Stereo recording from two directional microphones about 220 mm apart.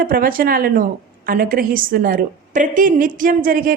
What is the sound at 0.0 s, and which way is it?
A woman's voice, 40° right (ahead or behind).